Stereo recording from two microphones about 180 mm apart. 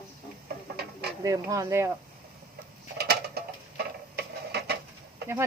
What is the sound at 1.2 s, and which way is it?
Speech, 20° right (ahead or behind).